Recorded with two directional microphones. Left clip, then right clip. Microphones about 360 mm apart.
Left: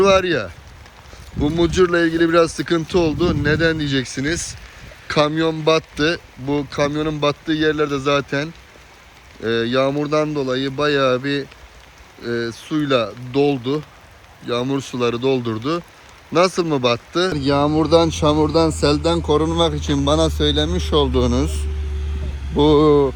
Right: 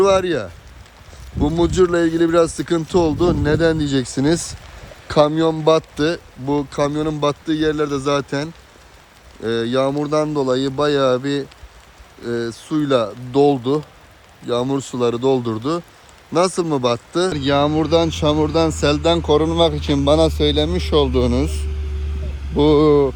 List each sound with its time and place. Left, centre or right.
0.0 s speech: centre
19.3 s speech: centre
21.0 s speech: centre